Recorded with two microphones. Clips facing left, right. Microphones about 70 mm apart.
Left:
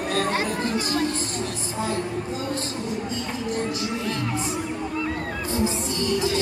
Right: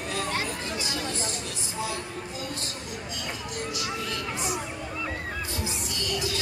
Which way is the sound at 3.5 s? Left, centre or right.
Left.